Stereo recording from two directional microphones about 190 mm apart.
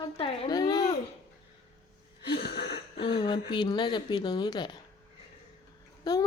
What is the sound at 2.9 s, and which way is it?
Speech, 25° left (ahead or behind).